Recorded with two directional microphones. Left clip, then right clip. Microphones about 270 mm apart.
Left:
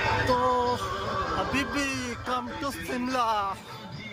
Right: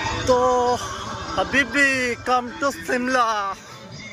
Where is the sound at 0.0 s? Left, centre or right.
Centre.